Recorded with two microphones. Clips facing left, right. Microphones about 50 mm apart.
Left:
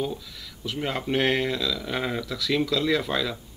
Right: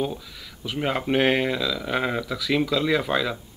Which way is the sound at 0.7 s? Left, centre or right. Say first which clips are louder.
Right 3 dB; centre.